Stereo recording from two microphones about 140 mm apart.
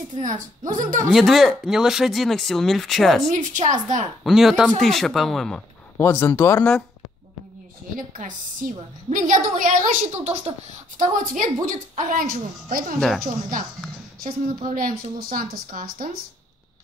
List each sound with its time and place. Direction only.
0.1 s a woman's voice: 65° right (ahead or behind)
1.1 s speech: centre (ahead or behind)
3.3 s a woman's voice: 65° right (ahead or behind)
4.2 s speech: centre (ahead or behind)
5.9 s speech: 15° left (ahead or behind)
7.9 s a woman's voice: 75° right (ahead or behind); by 10.4 s 55° right (ahead or behind)
11.0 s a woman's voice: 70° right (ahead or behind)
14.2 s a woman's voice: 70° right (ahead or behind); by 16.2 s 90° right